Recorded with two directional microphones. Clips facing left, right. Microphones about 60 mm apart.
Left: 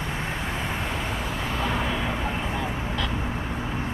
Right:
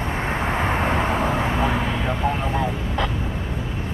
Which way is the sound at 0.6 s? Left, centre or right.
Right.